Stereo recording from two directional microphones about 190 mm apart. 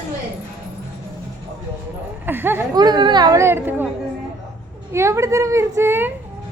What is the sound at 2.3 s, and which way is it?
Speech, 10° right (ahead or behind).